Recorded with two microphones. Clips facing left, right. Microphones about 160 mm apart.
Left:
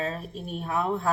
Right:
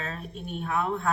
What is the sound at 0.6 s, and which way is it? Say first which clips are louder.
Speech: left 1 dB; 35° left (ahead or behind).